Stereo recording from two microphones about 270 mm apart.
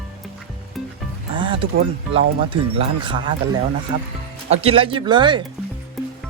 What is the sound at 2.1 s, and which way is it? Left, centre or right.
Speech, centre.